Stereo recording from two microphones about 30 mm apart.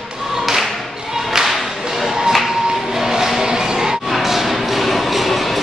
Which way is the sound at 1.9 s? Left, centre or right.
Centre.